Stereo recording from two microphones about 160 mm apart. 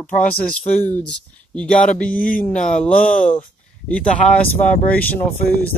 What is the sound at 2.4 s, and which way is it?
Speech, 5° left (ahead or behind).